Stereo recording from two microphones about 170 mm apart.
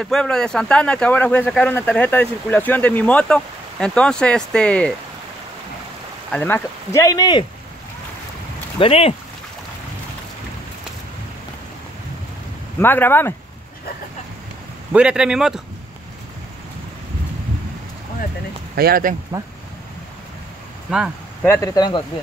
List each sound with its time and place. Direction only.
0.0 s speech: 5° left (ahead or behind)
6.3 s speech: 15° left (ahead or behind)
8.7 s speech: 35° left (ahead or behind)
12.8 s speech: 10° left (ahead or behind)
14.9 s a man's voice: 5° right (ahead or behind)
18.8 s speech: 60° right (ahead or behind)
21.4 s speech: 15° left (ahead or behind)